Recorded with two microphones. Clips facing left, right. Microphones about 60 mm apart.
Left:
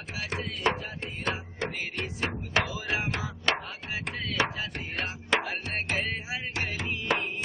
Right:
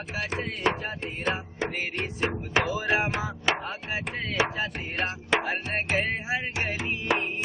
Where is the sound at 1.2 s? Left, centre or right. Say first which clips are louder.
Right 3 dB; centre.